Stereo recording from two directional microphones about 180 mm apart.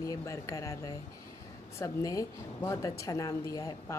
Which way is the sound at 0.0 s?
15° left (ahead or behind).